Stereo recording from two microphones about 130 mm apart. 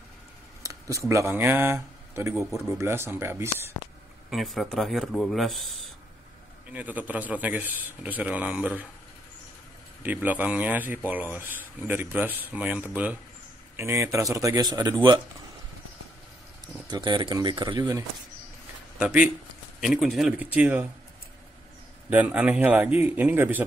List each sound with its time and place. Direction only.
0.7 s speech: 25° right (ahead or behind)
4.3 s speech: centre (ahead or behind)
6.7 s a man's voice: 10° right (ahead or behind)
10.0 s a man's voice: 15° right (ahead or behind); by 15.2 s 35° right (ahead or behind)
16.8 s speech: 35° right (ahead or behind)
18.9 s a man's voice: 10° right (ahead or behind)
20.3 s a man's voice: 15° right (ahead or behind)
22.1 s a man's voice: 10° right (ahead or behind)